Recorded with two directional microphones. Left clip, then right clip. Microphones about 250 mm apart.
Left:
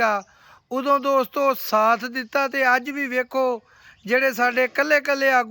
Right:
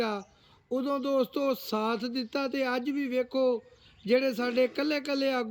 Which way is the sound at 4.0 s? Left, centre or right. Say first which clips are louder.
Left 7 dB; centre.